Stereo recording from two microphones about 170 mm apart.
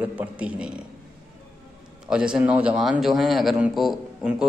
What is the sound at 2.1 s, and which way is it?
A man's voice, 5° right (ahead or behind).